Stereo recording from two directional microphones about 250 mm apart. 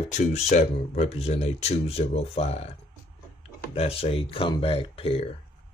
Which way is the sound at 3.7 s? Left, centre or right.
Left.